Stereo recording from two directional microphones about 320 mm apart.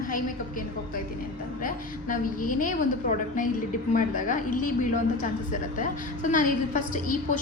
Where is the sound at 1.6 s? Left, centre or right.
Left.